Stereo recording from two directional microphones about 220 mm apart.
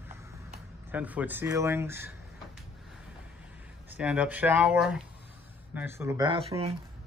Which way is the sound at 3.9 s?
5° right (ahead or behind).